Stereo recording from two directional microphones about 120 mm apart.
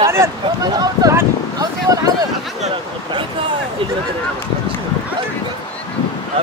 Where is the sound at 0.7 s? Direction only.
25° right (ahead or behind).